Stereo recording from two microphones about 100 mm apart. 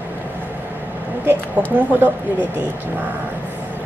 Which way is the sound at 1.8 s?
20° right (ahead or behind).